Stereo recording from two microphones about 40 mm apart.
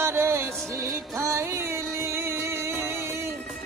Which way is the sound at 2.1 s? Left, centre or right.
Right.